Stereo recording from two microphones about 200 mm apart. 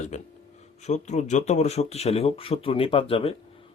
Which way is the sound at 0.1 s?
35° left (ahead or behind).